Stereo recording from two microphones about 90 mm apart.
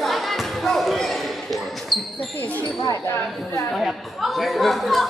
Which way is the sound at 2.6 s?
40° left (ahead or behind).